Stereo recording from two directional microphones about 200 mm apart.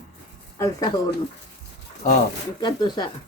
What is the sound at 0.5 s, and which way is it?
Speech, 15° left (ahead or behind).